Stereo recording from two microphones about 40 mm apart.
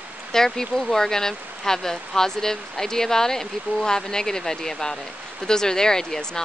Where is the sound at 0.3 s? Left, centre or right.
Centre.